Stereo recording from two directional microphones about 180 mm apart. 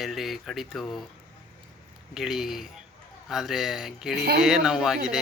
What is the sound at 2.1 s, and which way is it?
Speech, centre (ahead or behind).